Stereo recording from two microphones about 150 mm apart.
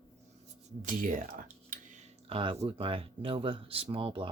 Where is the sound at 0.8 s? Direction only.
60° right (ahead or behind).